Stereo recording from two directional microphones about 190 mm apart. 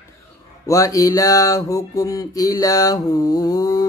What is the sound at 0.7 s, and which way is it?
Mantra, 15° left (ahead or behind).